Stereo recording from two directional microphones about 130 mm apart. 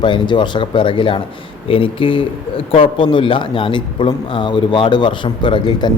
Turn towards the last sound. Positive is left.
turn(degrees=40)  # may be behind; listen again after turning